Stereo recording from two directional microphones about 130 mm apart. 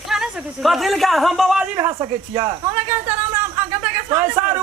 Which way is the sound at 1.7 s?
25° right (ahead or behind).